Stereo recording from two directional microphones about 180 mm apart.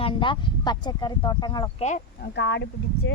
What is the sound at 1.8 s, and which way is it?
Speech, 40° left (ahead or behind).